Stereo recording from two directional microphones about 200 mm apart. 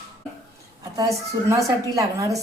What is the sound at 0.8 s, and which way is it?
A woman's voice, 15° right (ahead or behind).